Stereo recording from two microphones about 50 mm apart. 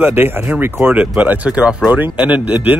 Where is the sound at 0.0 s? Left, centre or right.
Right.